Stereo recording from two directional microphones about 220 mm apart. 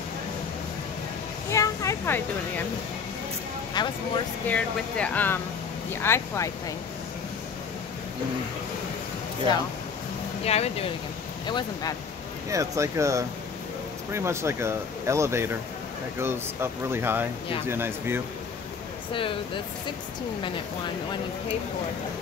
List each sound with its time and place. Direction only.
1.5 s a sound: 15° left (ahead or behind)
3.8 s speech: 20° left (ahead or behind)
4.5 s speech: 5° left (ahead or behind)
10.4 s speech: 30° left (ahead or behind)
12.4 s speech: 15° right (ahead or behind)
19.1 s speech: 25° left (ahead or behind)